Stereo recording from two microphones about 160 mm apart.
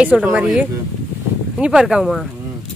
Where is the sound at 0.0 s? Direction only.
10° right (ahead or behind).